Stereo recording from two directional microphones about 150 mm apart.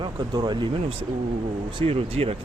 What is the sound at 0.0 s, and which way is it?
Speech, 30° right (ahead or behind).